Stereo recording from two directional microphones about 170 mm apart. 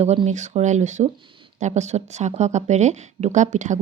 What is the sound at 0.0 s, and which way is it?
Speech, 40° right (ahead or behind).